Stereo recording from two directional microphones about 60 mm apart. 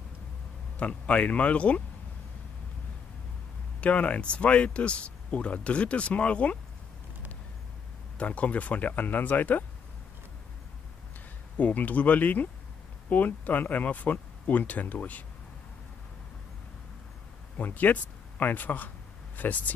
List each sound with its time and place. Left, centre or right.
0.7 s speech: left
3.8 s speech: left
8.2 s speech: left
11.5 s speech: left
17.6 s speech: left